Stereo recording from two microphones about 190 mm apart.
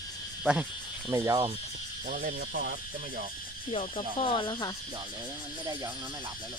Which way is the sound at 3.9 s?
25° left (ahead or behind).